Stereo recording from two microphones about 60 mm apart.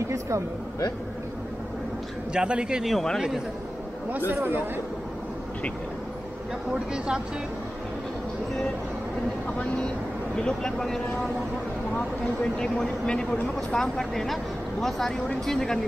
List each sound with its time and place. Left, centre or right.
0.0 s speech: right
2.3 s a man's voice: centre
2.8 s a man's voice: centre
4.1 s speech: right
6.7 s a man's voice: centre
10.3 s speech: centre
12.5 s speech: centre